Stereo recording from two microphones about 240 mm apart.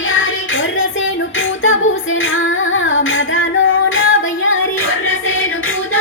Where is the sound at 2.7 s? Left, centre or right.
Left.